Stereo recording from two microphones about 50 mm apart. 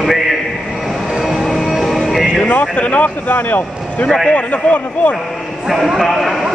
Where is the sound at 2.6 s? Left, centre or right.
Left.